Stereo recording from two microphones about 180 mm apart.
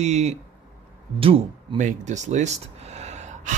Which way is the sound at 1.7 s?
40° right (ahead or behind).